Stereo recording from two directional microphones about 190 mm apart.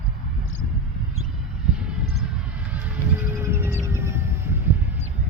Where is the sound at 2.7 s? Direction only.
10° right (ahead or behind).